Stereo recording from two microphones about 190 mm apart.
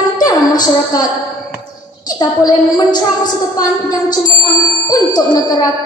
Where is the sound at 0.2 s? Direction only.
20° left (ahead or behind).